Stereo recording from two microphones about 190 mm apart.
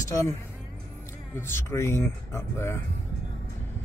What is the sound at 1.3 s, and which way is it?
Speech, 15° left (ahead or behind).